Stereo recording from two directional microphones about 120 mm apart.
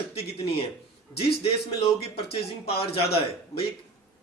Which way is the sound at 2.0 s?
55° left (ahead or behind).